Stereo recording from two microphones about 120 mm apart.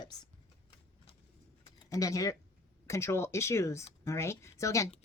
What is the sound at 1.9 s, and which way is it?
Speech, 30° left (ahead or behind).